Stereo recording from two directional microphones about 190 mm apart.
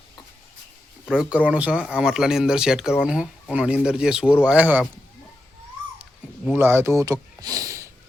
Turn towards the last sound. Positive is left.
turn(degrees=-15)  # may be behind; listen again after turning